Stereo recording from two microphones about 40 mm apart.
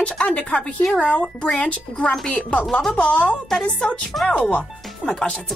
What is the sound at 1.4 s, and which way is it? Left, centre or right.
Speech, left.